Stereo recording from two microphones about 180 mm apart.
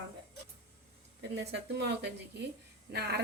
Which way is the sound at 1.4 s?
70° right (ahead or behind).